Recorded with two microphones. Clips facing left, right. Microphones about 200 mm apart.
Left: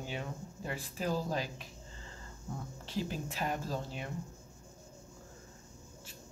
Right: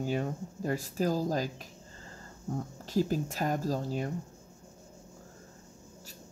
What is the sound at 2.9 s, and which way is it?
Speech, 40° right (ahead or behind).